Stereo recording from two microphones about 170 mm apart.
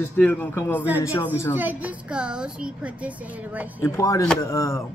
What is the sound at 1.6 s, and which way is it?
A woman's voice, 10° right (ahead or behind).